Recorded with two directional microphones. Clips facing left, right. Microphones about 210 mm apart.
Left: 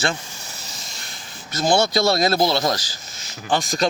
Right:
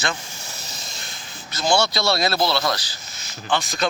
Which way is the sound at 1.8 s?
50° left (ahead or behind).